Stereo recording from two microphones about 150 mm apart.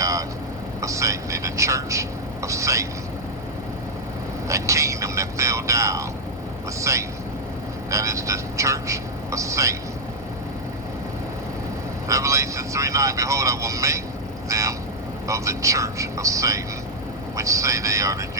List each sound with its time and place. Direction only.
0.0 s vehicle: 20° right (ahead or behind)
0.8 s a sound: 20° right (ahead or behind)
4.4 s vehicle: 20° right (ahead or behind)
12.0 s speech: 20° right (ahead or behind)